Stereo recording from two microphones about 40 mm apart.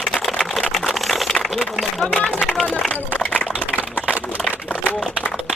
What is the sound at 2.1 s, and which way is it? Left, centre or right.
Speech, centre.